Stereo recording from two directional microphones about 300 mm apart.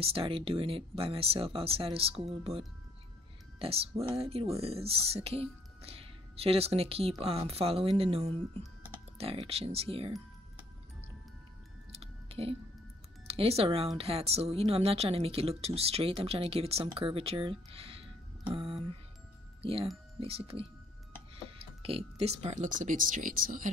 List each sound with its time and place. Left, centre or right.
0.0 s speech: centre
3.5 s speech: centre
11.9 s music: centre
13.3 s speech: centre